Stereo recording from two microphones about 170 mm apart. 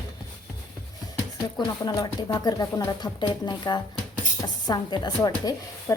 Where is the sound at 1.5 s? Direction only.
25° left (ahead or behind).